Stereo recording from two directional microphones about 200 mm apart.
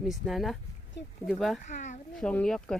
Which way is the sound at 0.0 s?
Centre (ahead or behind).